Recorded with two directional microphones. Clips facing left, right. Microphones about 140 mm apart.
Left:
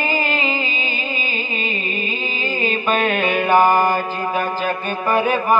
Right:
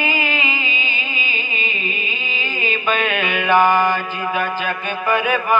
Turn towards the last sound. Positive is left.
turn(degrees=40)  # may be behind; listen again after turning